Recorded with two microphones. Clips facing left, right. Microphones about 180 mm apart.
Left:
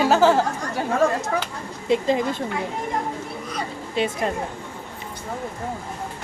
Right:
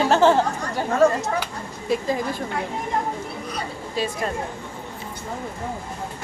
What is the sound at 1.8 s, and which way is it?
Speech, 20° left (ahead or behind).